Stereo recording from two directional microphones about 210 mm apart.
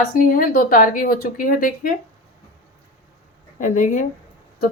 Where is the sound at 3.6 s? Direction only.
35° left (ahead or behind).